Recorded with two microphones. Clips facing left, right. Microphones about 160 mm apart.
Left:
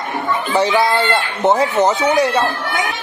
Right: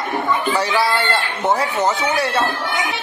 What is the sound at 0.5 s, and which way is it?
Speech, 20° left (ahead or behind).